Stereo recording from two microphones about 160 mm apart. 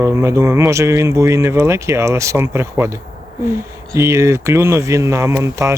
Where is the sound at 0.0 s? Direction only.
15° right (ahead or behind).